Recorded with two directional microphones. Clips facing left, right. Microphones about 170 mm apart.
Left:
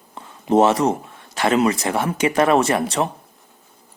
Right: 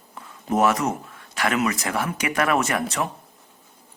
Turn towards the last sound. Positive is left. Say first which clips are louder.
# left 5 dB
turn(degrees=30)  # may be behind; listen again after turning